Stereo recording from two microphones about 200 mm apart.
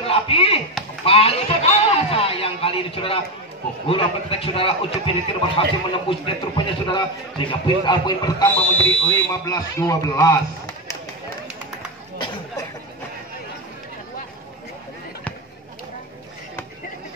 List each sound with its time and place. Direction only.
0.0 s chop: 30° left (ahead or behind)
1.0 s a sound: 30° left (ahead or behind)
3.8 s a man's voice: 30° left (ahead or behind)
8.5 s speech: 5° left (ahead or behind)